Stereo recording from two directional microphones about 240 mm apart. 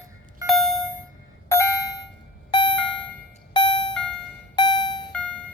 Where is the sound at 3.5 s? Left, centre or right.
Centre.